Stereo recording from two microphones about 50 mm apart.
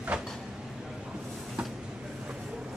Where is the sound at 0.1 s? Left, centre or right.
Centre.